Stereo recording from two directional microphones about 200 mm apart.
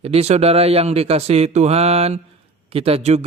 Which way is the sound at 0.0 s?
30° right (ahead or behind).